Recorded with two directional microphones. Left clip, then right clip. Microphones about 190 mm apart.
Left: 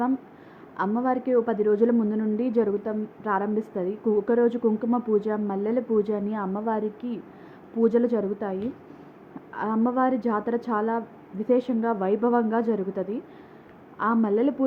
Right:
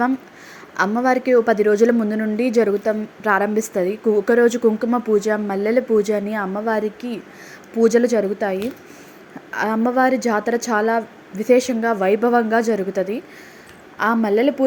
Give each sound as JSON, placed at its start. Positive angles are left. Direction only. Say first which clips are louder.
{"t": 1.0, "sound": "a woman's voice", "louder": "right 8 dB", "side_deg": -20}